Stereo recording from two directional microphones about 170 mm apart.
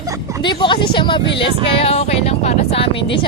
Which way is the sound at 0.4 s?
30° left (ahead or behind).